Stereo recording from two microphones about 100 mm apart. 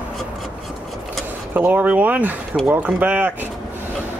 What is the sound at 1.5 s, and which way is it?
Speech, 15° right (ahead or behind).